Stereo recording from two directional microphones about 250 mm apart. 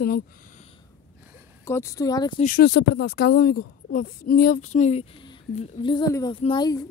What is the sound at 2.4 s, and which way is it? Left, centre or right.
Speech, left.